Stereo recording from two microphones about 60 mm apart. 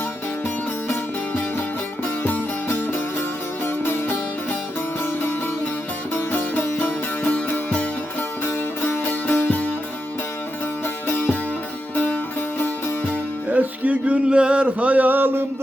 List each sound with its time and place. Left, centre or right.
2.2 s music: left
6.1 s music: left
8.4 s music: left
9.0 s music: left
11.1 s music: left
13.5 s a sound: right